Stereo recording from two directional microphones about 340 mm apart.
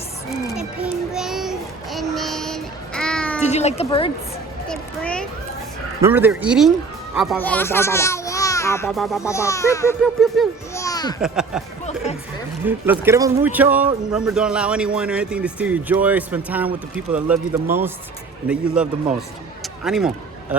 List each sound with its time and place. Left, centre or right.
0.3 s a sound: centre
3.4 s speech: centre
4.7 s children playing: centre
6.0 s speech: centre
11.2 s speech: centre
12.6 s speech: centre